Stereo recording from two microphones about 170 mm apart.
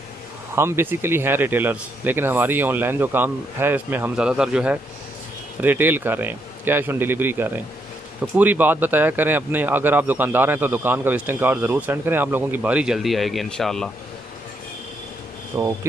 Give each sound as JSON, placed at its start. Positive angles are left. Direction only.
{"t": 0.6, "sound": "a man's voice", "side_deg": -15}
{"t": 15.5, "sound": "a man's voice", "side_deg": -15}